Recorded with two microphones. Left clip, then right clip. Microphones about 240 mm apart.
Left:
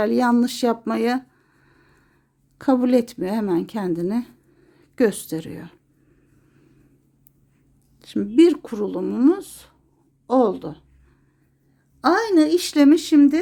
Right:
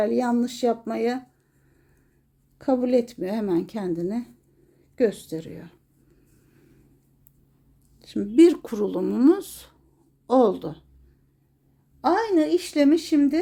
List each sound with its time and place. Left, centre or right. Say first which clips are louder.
0.0 s speech: left 4 dB; left
2.6 s a woman's voice: left 3 dB; left
7.9 s speech: left 1 dB; centre
12.0 s a woman's voice: left 4 dB; left